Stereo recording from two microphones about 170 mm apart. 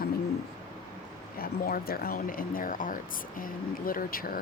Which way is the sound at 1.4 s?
60° left (ahead or behind).